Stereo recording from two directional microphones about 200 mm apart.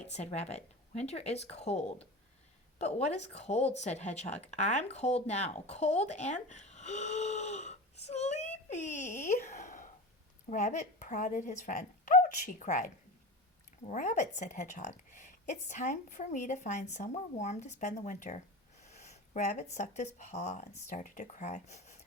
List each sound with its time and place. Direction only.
0.1 s a woman's voice: 35° left (ahead or behind)
13.8 s a woman's voice: 40° left (ahead or behind)
18.8 s a sound: 35° left (ahead or behind)
19.7 s a woman's voice: 35° left (ahead or behind)